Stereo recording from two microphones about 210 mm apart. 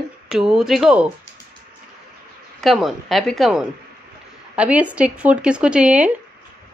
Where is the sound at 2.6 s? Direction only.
Centre (ahead or behind).